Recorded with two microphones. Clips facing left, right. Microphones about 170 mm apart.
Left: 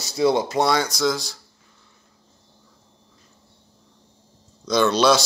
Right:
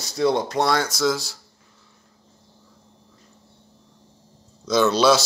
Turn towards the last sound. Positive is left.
turn(degrees=-5)  # may be behind; listen again after turning